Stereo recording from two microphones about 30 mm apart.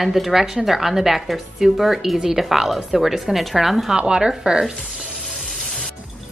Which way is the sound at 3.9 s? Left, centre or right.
Right.